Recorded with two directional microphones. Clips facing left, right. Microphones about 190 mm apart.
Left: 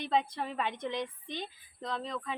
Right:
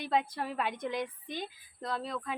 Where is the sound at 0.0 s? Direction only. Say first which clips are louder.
Even; 10° right (ahead or behind).